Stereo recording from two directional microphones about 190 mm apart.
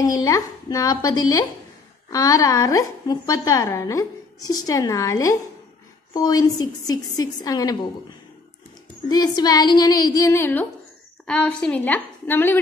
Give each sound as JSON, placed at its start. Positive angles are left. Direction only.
{"t": 0.0, "sound": "a woman's voice", "side_deg": 20}
{"t": 9.1, "sound": "a woman's voice", "side_deg": 20}